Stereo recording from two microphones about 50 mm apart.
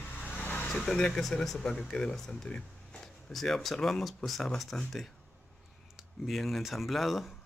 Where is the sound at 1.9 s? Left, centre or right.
Centre.